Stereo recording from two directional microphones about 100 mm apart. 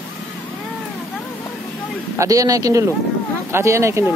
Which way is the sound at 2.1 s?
35° right (ahead or behind).